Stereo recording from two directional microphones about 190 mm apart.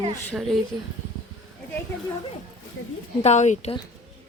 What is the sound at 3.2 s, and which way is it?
Speech, 40° left (ahead or behind).